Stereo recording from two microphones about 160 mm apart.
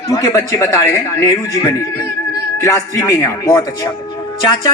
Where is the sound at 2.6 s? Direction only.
20° left (ahead or behind).